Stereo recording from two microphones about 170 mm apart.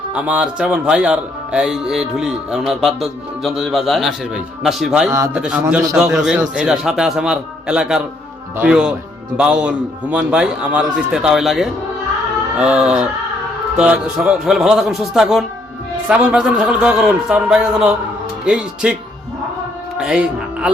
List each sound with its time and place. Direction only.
0.1 s speech: 5° right (ahead or behind)
5.6 s a man's voice: 15° right (ahead or behind)
6.0 s speech: 5° right (ahead or behind)
20.0 s speech: 5° right (ahead or behind)